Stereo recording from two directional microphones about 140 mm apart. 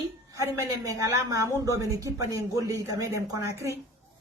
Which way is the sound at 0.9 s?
25° right (ahead or behind).